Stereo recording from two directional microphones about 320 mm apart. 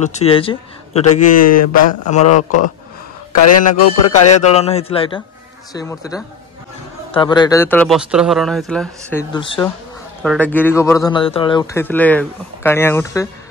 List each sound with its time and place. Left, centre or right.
0.0 s speech: centre
1.4 s speech: left
2.0 s speech: left
3.4 s speech: left
4.4 s speech: centre
9.3 s speech: centre
10.2 s speech: centre